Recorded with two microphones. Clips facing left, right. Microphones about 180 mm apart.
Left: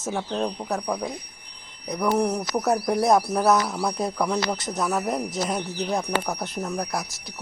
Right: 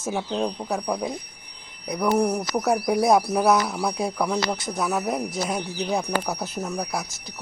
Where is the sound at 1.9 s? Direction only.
10° right (ahead or behind).